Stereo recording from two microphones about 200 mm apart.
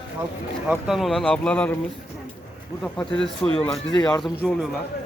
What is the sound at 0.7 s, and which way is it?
Speech, centre (ahead or behind).